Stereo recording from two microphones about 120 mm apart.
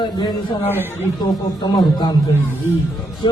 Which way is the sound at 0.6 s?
15° left (ahead or behind).